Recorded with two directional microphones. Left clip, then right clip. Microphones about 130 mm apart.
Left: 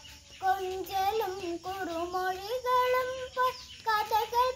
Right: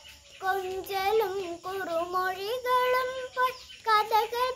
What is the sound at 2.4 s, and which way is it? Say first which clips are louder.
Child singing: even; 30° right (ahead or behind).